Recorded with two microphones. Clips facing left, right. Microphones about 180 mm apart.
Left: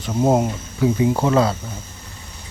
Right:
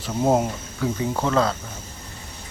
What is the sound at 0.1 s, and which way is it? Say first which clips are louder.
Speech: left 3 dB; 5° left (ahead or behind).